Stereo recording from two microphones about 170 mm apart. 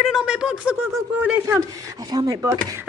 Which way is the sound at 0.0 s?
5° right (ahead or behind).